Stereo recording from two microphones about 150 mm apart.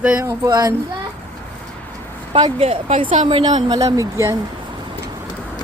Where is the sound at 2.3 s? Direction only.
40° right (ahead or behind).